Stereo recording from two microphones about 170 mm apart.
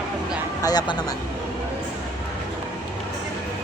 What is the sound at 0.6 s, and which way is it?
Speech, 25° left (ahead or behind).